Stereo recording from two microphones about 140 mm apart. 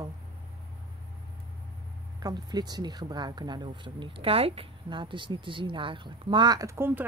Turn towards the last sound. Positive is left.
turn(degrees=-20)  # may be behind; listen again after turning